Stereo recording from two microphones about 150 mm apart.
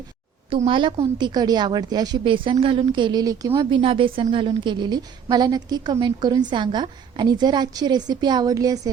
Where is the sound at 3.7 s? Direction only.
35° right (ahead or behind).